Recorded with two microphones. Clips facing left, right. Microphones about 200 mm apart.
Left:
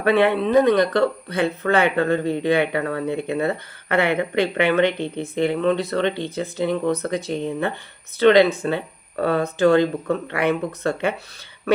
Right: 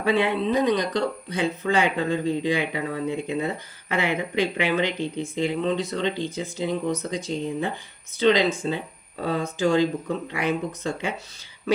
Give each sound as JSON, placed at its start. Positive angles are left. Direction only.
{"t": 0.0, "sound": "speech", "side_deg": 60}